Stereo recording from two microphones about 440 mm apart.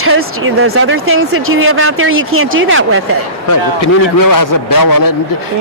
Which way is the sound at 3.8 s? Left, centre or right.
Left.